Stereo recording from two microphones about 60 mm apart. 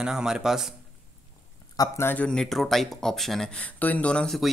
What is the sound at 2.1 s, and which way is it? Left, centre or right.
Speech, left.